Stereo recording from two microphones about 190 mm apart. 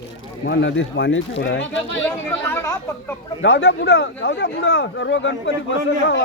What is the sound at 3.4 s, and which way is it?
Speech, 75° left (ahead or behind).